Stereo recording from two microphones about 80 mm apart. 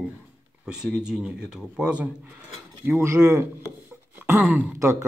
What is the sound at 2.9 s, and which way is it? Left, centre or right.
Speech, right.